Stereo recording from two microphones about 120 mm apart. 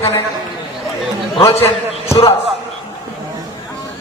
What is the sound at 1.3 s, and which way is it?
Speech, 55° left (ahead or behind).